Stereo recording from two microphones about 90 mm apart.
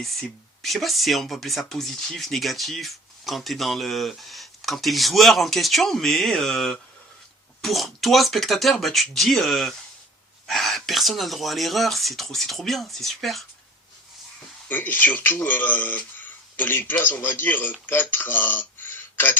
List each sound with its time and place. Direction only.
0.0 s speech: centre (ahead or behind)
14.7 s speech: 20° left (ahead or behind)